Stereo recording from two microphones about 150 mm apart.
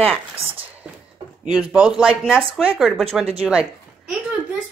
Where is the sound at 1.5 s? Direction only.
5° right (ahead or behind).